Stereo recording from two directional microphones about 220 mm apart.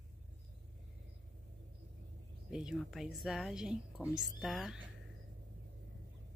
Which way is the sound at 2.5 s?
Centre (ahead or behind).